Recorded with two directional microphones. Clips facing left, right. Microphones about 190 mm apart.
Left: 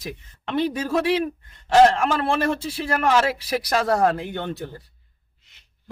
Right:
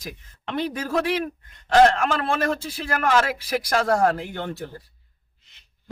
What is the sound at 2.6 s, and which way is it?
Speech, 5° left (ahead or behind).